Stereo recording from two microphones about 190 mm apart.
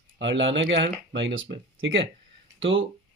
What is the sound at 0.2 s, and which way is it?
Speech, 75° right (ahead or behind).